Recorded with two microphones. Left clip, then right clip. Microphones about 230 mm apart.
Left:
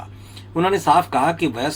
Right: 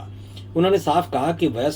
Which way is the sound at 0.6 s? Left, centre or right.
Left.